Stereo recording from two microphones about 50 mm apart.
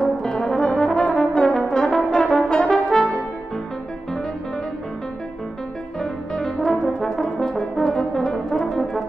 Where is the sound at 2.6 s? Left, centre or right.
Centre.